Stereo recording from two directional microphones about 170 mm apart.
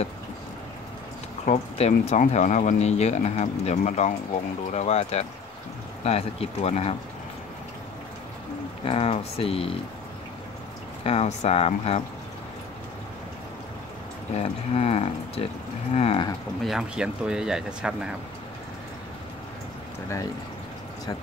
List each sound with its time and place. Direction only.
1.4 s speech: 40° left (ahead or behind)
8.8 s speech: 35° left (ahead or behind)
11.1 s speech: 35° left (ahead or behind)
14.3 s speech: 35° left (ahead or behind)
16.6 s speech: 5° right (ahead or behind)